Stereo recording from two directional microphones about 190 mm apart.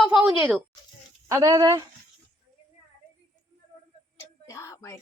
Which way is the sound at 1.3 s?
20° right (ahead or behind).